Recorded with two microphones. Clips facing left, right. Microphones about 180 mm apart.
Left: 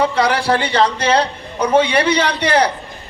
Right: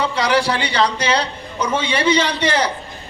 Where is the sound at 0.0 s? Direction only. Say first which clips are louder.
Left 2 dB; 55° left (ahead or behind).